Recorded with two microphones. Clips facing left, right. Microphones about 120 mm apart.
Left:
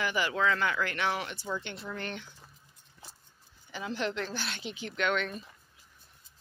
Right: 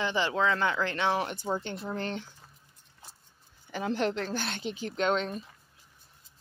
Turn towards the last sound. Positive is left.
turn(degrees=-35)  # may be behind; listen again after turning